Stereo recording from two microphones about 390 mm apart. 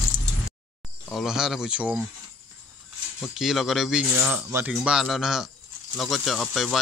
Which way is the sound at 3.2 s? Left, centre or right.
Centre.